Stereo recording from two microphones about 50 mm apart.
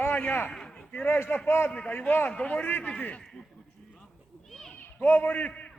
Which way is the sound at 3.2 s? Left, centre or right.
Centre.